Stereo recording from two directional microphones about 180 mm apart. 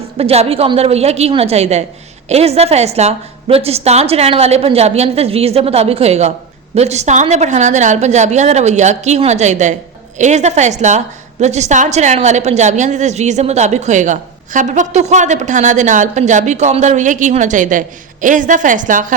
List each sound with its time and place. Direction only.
0.2 s a woman's voice: 35° right (ahead or behind)